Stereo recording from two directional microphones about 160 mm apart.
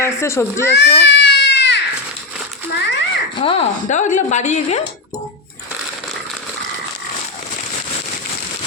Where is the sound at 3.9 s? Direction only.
50° left (ahead or behind).